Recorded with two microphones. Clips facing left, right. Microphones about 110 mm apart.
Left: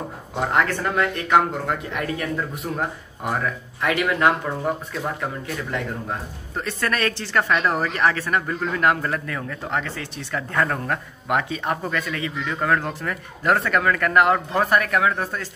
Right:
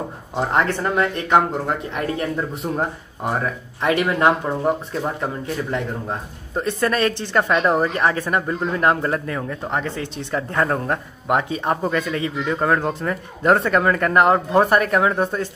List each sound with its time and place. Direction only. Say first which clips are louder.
0.4 s speech: right 2 dB; 25° right (ahead or behind)